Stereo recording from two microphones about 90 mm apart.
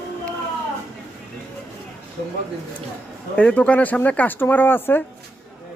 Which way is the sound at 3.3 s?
15° left (ahead or behind).